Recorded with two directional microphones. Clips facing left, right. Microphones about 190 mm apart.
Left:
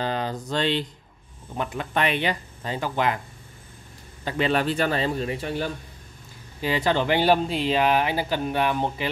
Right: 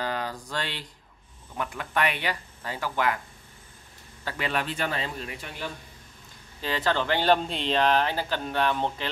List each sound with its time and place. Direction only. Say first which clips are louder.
0.0 s speech: left 4 dB; 25° left (ahead or behind)
4.2 s speech: left 7 dB; 20° left (ahead or behind)
4.5 s speech: left 6 dB; 35° left (ahead or behind)
6.6 s speech: left 4 dB; 15° left (ahead or behind)